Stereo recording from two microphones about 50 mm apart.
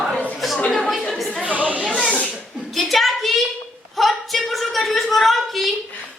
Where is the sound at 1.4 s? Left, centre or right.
Right.